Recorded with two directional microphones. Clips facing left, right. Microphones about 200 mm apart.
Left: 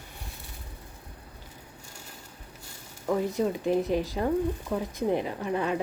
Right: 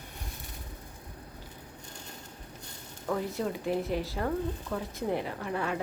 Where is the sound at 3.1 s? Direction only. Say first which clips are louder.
Left 5 dB; 20° left (ahead or behind).